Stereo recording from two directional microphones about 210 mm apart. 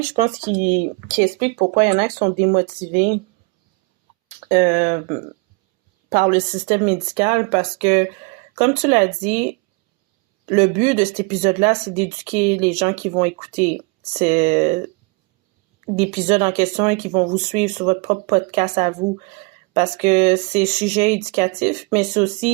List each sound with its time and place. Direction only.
1.4 s speech: 35° right (ahead or behind)
4.4 s speech: 35° right (ahead or behind)
15.9 s speech: 30° right (ahead or behind)